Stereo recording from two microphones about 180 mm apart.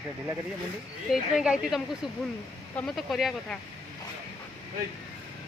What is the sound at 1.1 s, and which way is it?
A woman's voice, 5° right (ahead or behind).